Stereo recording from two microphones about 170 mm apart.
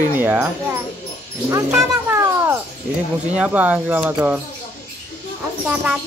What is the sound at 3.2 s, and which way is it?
Speech, 10° right (ahead or behind).